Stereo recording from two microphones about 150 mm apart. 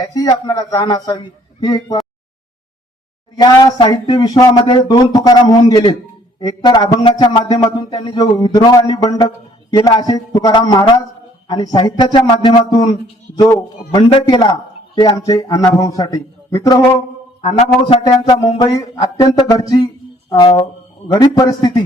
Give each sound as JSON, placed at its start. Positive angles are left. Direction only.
{"t": 0.0, "sound": "speech", "side_deg": 25}
{"t": 3.3, "sound": "speech", "side_deg": 30}
{"t": 17.8, "sound": "speech", "side_deg": 35}